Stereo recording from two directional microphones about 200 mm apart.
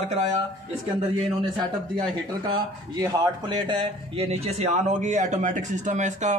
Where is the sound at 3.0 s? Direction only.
20° right (ahead or behind); by 6.4 s 35° right (ahead or behind).